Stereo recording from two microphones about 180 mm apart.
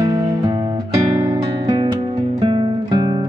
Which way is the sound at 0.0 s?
20° right (ahead or behind).